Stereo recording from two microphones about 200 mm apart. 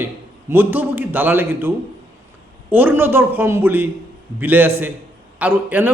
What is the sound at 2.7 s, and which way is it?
A man's voice, 10° right (ahead or behind).